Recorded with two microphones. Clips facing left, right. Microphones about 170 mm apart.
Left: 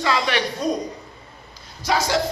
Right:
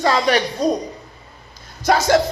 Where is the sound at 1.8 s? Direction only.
50° right (ahead or behind).